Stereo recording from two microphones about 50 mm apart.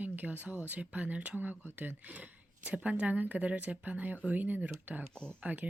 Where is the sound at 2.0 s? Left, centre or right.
Right.